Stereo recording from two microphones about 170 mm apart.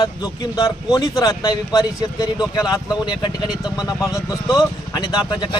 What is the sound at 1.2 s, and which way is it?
Speech, 25° left (ahead or behind).